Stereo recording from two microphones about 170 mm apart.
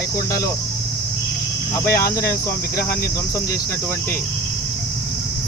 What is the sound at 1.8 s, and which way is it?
Cricket, 15° left (ahead or behind).